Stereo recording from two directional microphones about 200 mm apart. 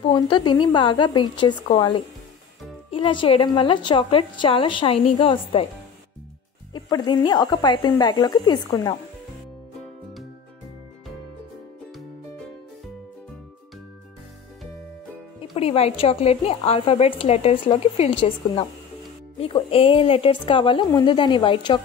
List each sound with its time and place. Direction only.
0.0 s speech: 20° left (ahead or behind)
6.7 s speech: 20° left (ahead or behind)
15.5 s speech: 30° left (ahead or behind)